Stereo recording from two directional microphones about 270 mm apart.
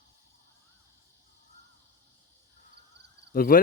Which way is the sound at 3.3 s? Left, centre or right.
Left.